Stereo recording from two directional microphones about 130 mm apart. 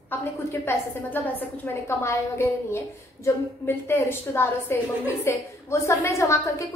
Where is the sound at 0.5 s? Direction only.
15° left (ahead or behind).